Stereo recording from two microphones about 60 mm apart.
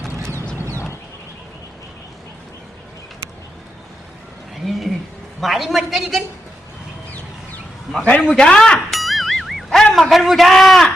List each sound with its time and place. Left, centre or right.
0.2 s a sound: right
4.6 s a sound: centre
5.4 s a man's voice: centre
8.0 s speech: centre
8.9 s music: centre
9.9 s a man's voice: centre